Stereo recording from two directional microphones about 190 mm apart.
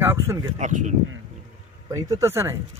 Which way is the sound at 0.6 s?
40° right (ahead or behind).